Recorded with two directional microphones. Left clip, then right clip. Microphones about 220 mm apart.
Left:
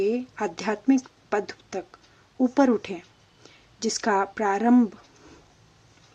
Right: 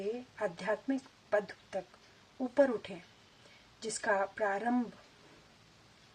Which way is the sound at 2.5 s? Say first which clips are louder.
Left 6 dB; 35° left (ahead or behind).